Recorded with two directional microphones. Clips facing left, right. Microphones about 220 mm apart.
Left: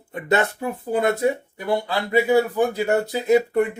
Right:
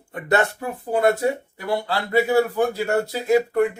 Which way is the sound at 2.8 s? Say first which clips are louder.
Left 1 dB; 20° left (ahead or behind).